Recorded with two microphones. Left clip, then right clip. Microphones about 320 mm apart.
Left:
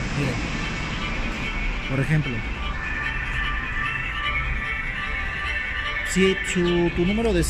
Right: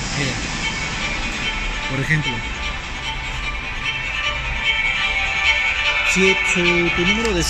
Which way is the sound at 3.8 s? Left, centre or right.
Centre.